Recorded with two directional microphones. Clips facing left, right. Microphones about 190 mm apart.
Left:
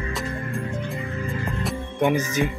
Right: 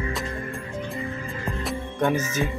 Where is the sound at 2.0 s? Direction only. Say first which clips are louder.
Left 2 dB; 15° left (ahead or behind).